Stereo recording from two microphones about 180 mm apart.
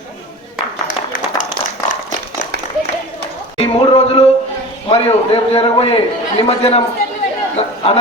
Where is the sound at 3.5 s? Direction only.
30° left (ahead or behind).